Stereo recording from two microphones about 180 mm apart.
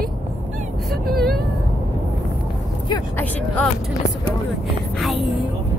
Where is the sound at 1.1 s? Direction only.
55° right (ahead or behind).